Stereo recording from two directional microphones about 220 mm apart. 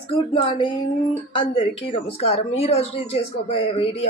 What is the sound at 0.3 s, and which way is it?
Speech, 20° left (ahead or behind).